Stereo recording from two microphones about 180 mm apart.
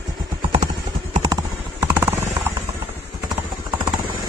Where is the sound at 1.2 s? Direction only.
20° right (ahead or behind).